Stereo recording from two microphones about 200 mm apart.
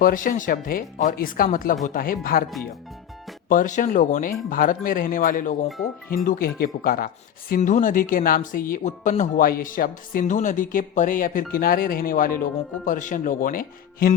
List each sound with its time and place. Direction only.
0.0 s speech: 45° left (ahead or behind)
3.5 s speech: 40° left (ahead or behind)